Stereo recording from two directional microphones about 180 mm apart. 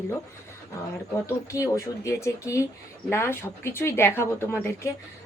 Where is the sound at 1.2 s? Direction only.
15° left (ahead or behind).